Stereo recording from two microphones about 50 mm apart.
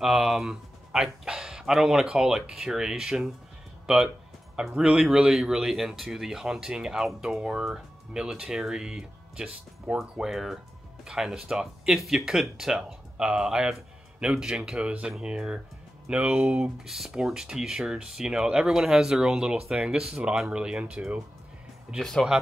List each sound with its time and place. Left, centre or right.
0.0 s speech: centre
16.7 s speech: centre